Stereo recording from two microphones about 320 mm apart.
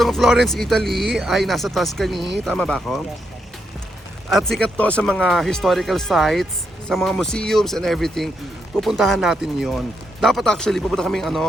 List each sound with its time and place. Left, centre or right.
0.0 s speech: centre
4.3 s speech: centre